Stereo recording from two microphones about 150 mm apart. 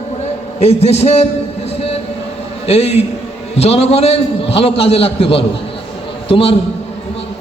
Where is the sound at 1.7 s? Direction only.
40° left (ahead or behind).